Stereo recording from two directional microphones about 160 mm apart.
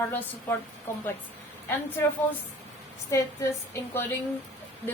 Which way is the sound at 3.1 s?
20° left (ahead or behind).